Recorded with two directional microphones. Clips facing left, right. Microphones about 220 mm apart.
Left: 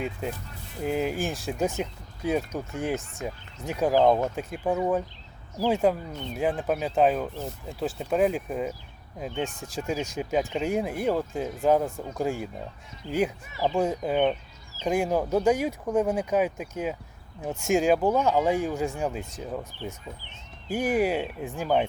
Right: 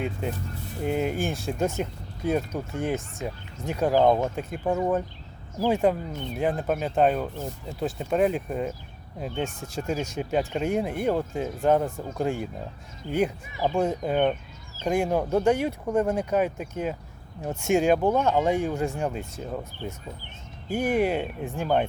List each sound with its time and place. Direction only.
0.0 s speech: centre (ahead or behind)
9.8 s speech: 5° left (ahead or behind)
19.8 s speech: 50° right (ahead or behind)
20.7 s speech: 5° left (ahead or behind)